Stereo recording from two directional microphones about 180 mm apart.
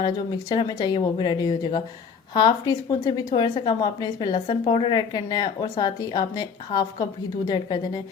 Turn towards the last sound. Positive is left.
turn(degrees=25)  # may be behind; listen again after turning